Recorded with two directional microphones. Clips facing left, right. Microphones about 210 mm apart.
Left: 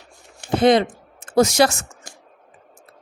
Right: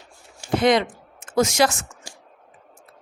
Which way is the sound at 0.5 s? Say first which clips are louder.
Left 3 dB; 30° left (ahead or behind).